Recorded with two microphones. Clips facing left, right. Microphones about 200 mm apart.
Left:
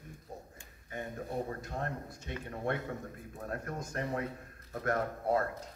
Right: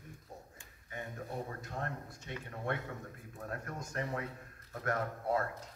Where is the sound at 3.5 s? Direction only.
40° left (ahead or behind).